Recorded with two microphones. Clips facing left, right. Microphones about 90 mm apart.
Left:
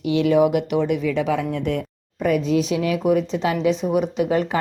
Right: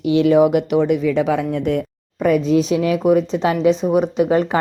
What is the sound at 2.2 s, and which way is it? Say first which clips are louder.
Speech: right 4 dB; 40° right (ahead or behind).